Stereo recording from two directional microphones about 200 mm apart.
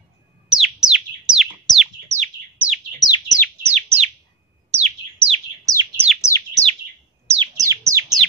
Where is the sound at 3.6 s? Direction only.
35° right (ahead or behind).